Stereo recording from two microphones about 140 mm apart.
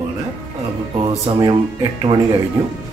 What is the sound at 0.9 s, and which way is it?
Speech, 35° right (ahead or behind).